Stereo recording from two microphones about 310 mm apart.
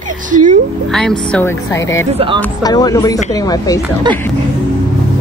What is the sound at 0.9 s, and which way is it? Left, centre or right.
Speech, centre.